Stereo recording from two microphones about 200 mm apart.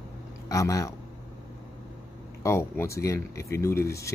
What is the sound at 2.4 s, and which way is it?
Speech, 15° left (ahead or behind).